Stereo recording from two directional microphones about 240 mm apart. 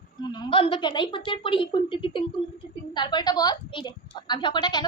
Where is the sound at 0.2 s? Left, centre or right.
Centre.